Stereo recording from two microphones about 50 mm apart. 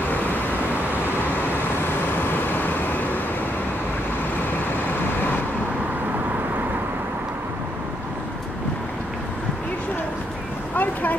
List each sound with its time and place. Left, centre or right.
2.3 s vehicle: left
10.8 s vehicle: left